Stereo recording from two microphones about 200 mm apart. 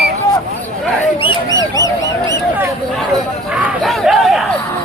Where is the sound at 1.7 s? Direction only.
15° left (ahead or behind).